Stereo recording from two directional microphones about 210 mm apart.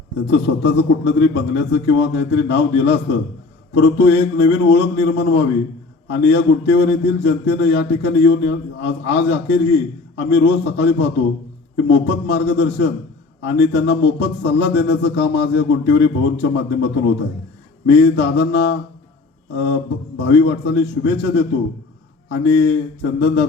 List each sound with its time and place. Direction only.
0.3 s a man's voice: 60° left (ahead or behind)
20.1 s a man's voice: 55° left (ahead or behind)